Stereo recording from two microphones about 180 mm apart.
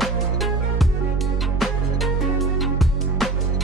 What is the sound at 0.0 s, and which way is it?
Music, centre (ahead or behind).